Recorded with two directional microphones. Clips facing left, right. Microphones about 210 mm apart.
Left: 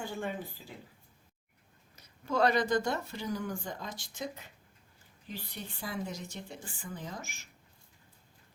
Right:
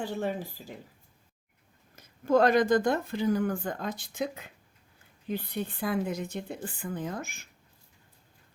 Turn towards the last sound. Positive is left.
turn(degrees=-55)  # may be behind; listen again after turning